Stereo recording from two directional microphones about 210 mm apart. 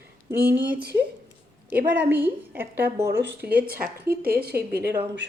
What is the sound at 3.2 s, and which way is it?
Speech, 50° right (ahead or behind).